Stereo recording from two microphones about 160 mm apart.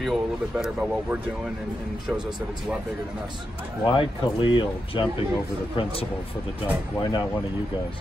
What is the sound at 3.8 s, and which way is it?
Speech, 30° left (ahead or behind).